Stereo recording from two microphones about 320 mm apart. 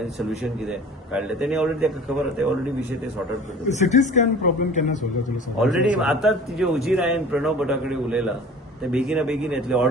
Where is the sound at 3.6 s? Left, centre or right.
Left.